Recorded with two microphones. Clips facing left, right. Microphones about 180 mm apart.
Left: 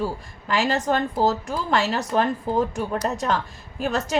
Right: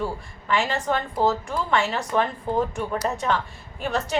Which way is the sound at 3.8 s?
40° left (ahead or behind).